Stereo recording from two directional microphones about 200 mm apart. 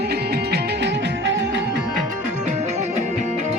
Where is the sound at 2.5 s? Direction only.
35° right (ahead or behind).